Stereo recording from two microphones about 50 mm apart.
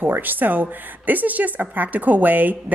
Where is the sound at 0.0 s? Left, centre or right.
Right.